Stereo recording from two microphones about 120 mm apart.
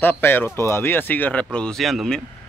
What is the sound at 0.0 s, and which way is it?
Speech, 15° left (ahead or behind).